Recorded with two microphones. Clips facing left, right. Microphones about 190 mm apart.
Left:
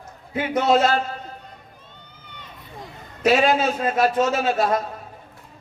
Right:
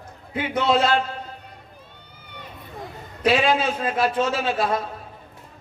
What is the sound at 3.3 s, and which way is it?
A man's voice, 45° left (ahead or behind).